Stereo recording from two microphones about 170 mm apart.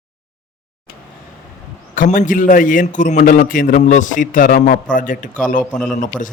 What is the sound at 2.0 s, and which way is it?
A man's voice, 50° left (ahead or behind).